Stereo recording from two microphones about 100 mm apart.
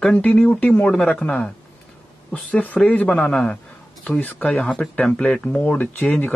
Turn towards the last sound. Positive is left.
turn(degrees=15)  # may be behind; listen again after turning